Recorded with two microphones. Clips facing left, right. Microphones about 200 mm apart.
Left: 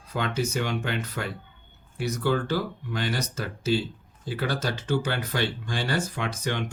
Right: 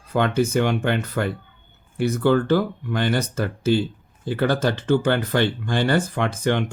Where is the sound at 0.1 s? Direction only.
55° right (ahead or behind).